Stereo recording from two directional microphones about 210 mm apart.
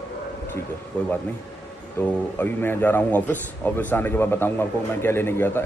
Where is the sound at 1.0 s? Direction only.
5° left (ahead or behind).